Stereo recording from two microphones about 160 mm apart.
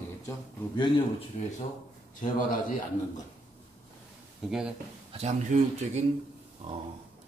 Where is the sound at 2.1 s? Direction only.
55° left (ahead or behind).